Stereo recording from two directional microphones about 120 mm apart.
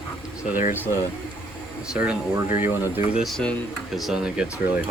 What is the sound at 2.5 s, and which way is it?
Speech, 10° right (ahead or behind).